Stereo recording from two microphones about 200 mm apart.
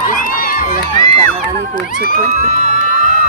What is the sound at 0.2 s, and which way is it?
Run, 45° left (ahead or behind).